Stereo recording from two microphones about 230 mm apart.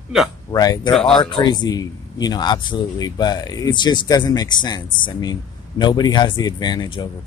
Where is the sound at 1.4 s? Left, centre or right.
Centre.